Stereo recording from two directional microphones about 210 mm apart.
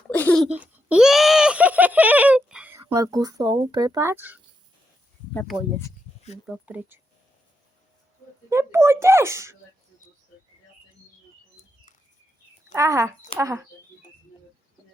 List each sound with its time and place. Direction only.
0.1 s a sound: 10° left (ahead or behind)
0.4 s a sound: 5° right (ahead or behind)
2.8 s speech: 15° right (ahead or behind)
5.3 s speech: 10° left (ahead or behind)
6.5 s speech: 5° right (ahead or behind)
8.4 s speech: 10° right (ahead or behind)
12.7 s speech: 15° right (ahead or behind)